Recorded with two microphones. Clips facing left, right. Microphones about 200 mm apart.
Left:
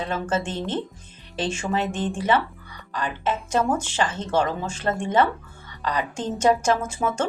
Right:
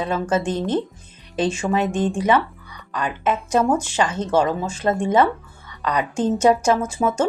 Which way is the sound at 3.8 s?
10° right (ahead or behind).